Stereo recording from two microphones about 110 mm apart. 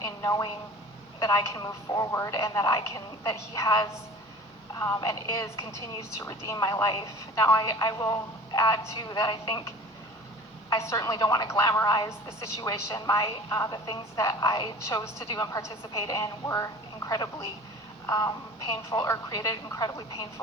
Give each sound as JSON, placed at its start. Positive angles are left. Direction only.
{"t": 0.0, "sound": "a sound", "side_deg": 35}
{"t": 1.2, "sound": "a woman's voice", "side_deg": 30}
{"t": 5.0, "sound": "a woman's voice", "side_deg": 30}
{"t": 10.7, "sound": "a woman's voice", "side_deg": 30}